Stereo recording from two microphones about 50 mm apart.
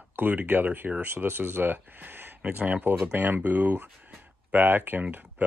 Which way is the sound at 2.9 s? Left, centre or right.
Right.